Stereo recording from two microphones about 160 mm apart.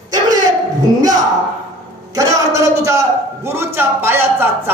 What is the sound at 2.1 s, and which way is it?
A man's voice, 20° right (ahead or behind).